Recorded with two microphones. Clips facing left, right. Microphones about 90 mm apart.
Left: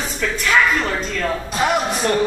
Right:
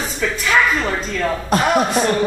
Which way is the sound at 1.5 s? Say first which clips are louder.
Right 4 dB; 50° right (ahead or behind).